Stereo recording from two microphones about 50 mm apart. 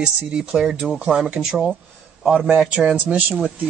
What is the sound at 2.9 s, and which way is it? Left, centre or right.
Speech, right.